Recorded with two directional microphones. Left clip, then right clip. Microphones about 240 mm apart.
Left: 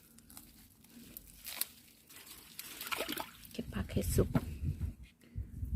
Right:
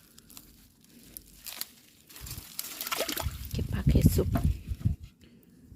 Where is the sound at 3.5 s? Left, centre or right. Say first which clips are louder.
Right 9 dB; centre.